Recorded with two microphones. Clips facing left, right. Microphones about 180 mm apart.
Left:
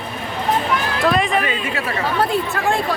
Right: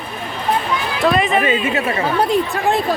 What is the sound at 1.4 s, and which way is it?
Speech, 25° right (ahead or behind).